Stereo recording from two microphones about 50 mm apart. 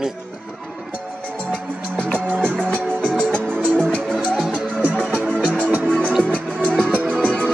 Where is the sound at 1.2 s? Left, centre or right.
Left.